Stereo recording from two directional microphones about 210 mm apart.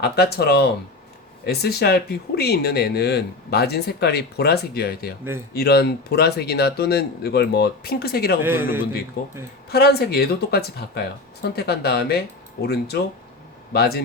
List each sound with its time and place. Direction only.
0.0 s speech: 50° left (ahead or behind)
8.4 s a man's voice: 10° right (ahead or behind)
9.2 s speech: 40° left (ahead or behind)